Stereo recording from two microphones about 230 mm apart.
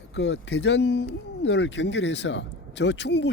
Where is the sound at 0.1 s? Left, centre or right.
Left.